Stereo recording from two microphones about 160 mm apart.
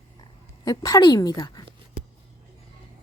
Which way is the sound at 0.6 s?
25° left (ahead or behind).